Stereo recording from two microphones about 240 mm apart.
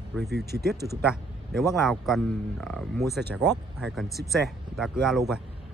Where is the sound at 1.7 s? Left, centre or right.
Centre.